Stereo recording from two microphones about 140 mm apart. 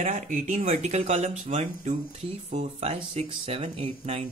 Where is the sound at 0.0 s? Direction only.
65° right (ahead or behind).